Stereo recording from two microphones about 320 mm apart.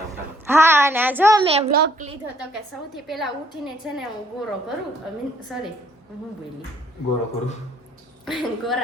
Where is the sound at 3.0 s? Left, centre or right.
Centre.